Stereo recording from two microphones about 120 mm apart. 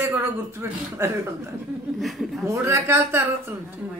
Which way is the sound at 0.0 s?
20° right (ahead or behind).